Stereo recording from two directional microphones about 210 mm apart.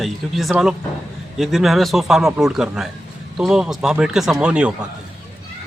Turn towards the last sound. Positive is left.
turn(degrees=-5)  # may be behind; listen again after turning